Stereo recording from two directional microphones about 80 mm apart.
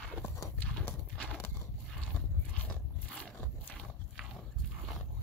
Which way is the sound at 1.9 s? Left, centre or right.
Centre.